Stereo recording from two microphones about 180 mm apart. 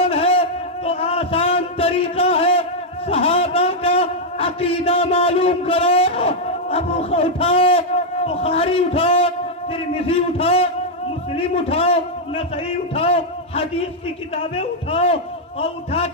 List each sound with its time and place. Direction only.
0.0 s a sound: 35° left (ahead or behind)
3.1 s a man's voice: 30° left (ahead or behind)
14.5 s a man's voice: 35° left (ahead or behind)